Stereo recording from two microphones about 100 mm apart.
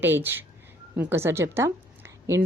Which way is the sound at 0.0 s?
20° right (ahead or behind).